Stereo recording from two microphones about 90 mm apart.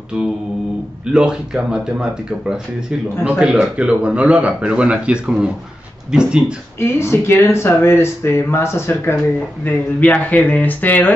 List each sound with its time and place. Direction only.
1.1 s speech: 10° right (ahead or behind)
3.3 s speech: 10° right (ahead or behind)
6.8 s speech: 30° left (ahead or behind)